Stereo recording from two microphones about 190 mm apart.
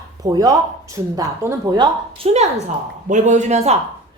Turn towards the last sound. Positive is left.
turn(degrees=-35)  # may be behind; listen again after turning